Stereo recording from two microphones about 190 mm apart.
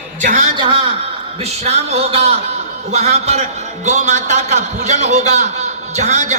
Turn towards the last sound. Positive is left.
turn(degrees=-40)  # may be behind; listen again after turning